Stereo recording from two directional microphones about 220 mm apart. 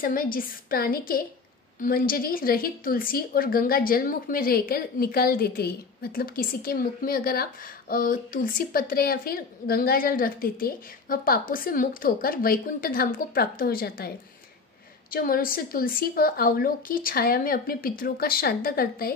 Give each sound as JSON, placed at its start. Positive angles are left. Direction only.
{"t": 0.0, "sound": "a woman's voice", "side_deg": 40}